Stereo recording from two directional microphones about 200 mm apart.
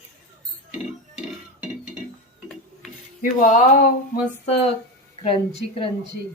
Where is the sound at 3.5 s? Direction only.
40° left (ahead or behind).